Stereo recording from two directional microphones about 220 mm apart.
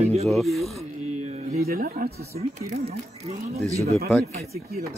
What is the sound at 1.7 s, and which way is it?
Speech, 45° right (ahead or behind).